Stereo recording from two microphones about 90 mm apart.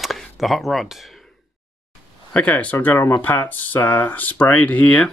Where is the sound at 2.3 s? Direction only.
15° left (ahead or behind).